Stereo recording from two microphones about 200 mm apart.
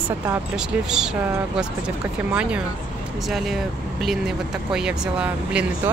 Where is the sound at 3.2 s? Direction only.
Centre (ahead or behind).